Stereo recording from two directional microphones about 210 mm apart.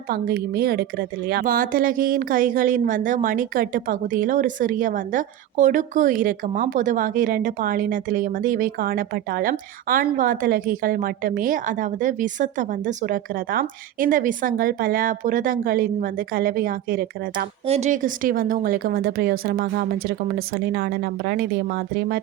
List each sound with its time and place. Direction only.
0.1 s a woman's voice: 45° right (ahead or behind)
17.7 s speech: 30° right (ahead or behind); by 22.2 s 50° right (ahead or behind)